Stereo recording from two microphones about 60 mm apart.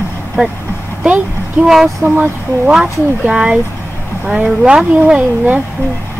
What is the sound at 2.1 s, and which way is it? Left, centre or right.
Speech, right.